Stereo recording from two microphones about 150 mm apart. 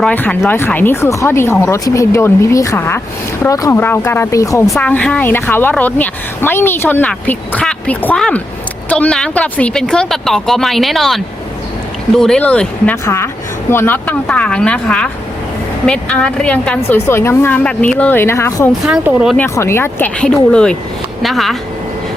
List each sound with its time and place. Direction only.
0.0 s a woman's voice: 10° left (ahead or behind)
4.7 s a woman's voice: 10° left (ahead or behind)
18.9 s speech: 5° right (ahead or behind)
19.4 s a woman's voice: 15° left (ahead or behind); by 21.5 s centre (ahead or behind)